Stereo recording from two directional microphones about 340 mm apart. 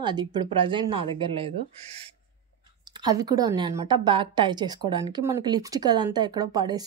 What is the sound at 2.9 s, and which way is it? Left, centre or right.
A woman's voice, centre.